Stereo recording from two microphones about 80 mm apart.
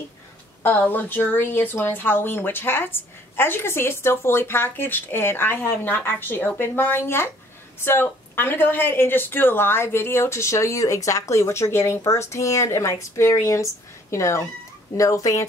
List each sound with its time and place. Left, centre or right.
0.6 s a woman's voice: left